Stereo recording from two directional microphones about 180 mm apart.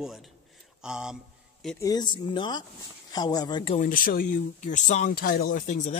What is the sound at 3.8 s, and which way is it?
Speech, 50° left (ahead or behind).